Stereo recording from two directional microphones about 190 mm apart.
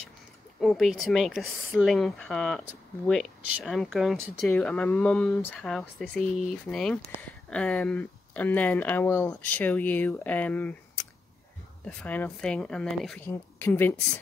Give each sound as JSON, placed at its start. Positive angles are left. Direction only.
{"t": 0.6, "sound": "speech", "side_deg": 0}